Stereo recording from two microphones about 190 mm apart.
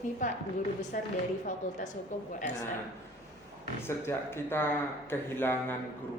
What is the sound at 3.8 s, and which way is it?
Speech, 10° left (ahead or behind).